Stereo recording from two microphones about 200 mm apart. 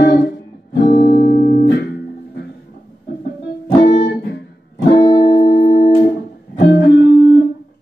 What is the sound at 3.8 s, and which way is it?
Music, 55° left (ahead or behind).